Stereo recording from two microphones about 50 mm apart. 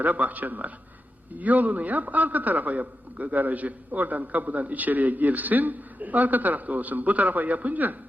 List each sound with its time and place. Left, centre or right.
0.0 s a man's voice: right